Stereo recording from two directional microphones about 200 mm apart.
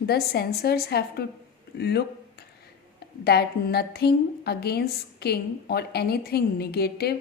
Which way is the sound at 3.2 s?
55° left (ahead or behind).